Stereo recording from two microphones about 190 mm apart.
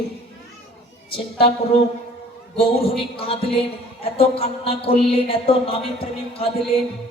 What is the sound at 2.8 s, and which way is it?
A man's voice, 30° left (ahead or behind).